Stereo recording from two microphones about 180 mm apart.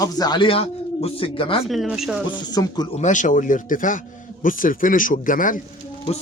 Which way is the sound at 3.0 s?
45° left (ahead or behind).